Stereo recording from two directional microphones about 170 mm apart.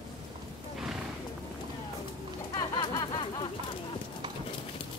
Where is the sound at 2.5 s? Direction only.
25° left (ahead or behind).